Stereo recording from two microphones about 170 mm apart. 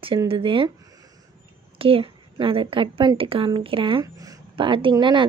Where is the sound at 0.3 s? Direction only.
30° right (ahead or behind).